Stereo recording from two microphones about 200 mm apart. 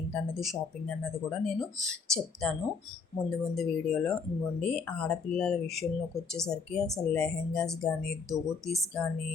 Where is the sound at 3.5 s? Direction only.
Centre (ahead or behind).